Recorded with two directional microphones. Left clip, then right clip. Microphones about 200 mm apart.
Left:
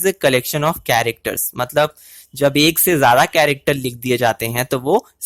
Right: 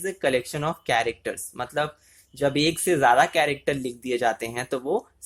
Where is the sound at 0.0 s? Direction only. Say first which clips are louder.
Left 9 dB; 40° left (ahead or behind).